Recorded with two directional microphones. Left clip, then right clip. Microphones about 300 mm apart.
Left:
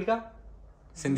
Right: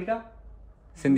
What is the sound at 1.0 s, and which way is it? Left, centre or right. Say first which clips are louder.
Speech: right 7 dB; right.